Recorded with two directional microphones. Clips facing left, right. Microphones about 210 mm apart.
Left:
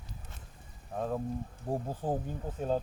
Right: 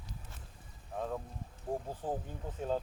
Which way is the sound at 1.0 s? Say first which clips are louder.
Left 5 dB; 40° left (ahead or behind).